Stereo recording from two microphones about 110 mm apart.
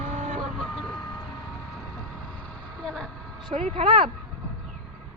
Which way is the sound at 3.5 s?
60° right (ahead or behind).